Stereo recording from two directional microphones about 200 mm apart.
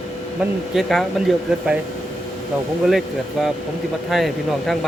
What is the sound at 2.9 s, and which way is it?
Speech, centre (ahead or behind).